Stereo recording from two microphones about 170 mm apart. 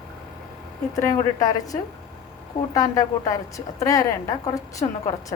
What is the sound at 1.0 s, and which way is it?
A woman's voice, 20° left (ahead or behind).